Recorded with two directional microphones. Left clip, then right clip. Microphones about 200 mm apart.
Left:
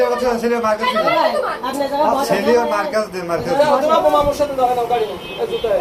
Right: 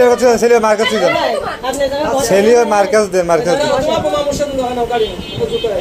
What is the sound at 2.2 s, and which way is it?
A man's voice, 55° right (ahead or behind).